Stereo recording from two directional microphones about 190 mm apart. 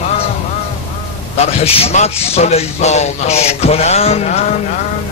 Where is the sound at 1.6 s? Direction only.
30° left (ahead or behind).